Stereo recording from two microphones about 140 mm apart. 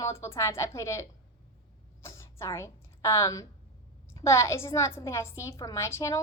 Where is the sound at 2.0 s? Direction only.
20° left (ahead or behind).